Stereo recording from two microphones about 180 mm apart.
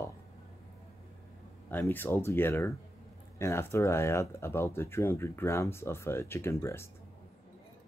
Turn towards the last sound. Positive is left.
turn(degrees=15)  # may be behind; listen again after turning